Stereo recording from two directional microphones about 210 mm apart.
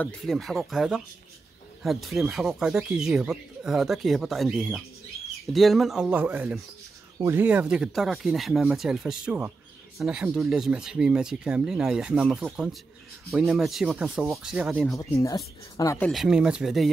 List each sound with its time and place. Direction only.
0.0 s speech: centre (ahead or behind)
15.0 s speech: 15° left (ahead or behind)
16.1 s speech: centre (ahead or behind)